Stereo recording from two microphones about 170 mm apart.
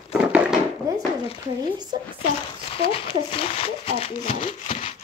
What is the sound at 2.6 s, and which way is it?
Speech, 35° left (ahead or behind).